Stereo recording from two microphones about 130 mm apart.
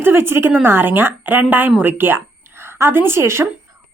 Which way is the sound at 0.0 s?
20° right (ahead or behind).